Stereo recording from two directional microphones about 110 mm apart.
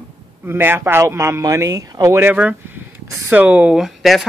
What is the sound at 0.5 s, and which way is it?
Speech, 20° right (ahead or behind).